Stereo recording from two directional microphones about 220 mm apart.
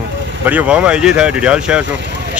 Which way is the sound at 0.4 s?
5° right (ahead or behind).